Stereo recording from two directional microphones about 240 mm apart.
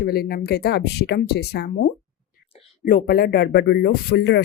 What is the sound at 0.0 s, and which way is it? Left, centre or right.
Speech, left.